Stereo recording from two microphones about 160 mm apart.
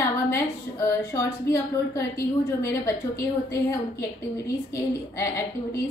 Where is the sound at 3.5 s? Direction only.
20° left (ahead or behind).